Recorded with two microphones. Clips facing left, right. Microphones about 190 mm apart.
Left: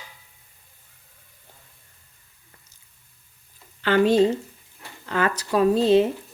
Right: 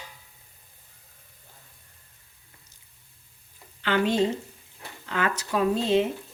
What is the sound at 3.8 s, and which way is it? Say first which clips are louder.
A woman's voice: left 6 dB; 40° left (ahead or behind).